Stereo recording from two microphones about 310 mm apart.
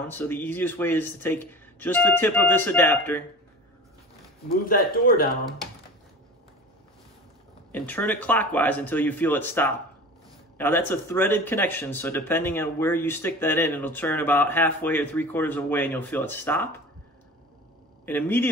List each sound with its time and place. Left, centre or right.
0.1 s speech: centre
4.5 s speech: left
7.7 s speech: centre
18.0 s speech: centre